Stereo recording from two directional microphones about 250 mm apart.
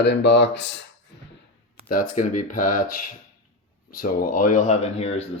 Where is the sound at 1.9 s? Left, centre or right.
Left.